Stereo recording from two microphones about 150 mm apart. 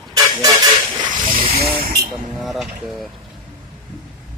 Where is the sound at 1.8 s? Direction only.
85° right.